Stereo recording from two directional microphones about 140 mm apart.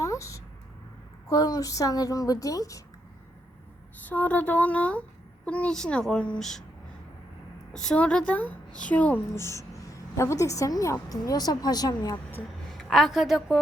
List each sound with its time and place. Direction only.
0.0 s a sound: 20° left (ahead or behind)
1.3 s a woman's voice: 25° left (ahead or behind)
4.1 s a woman's voice: 10° left (ahead or behind)
7.7 s a woman's voice: 5° left (ahead or behind); by 12.2 s 25° left (ahead or behind)
12.7 s a woman's voice: centre (ahead or behind)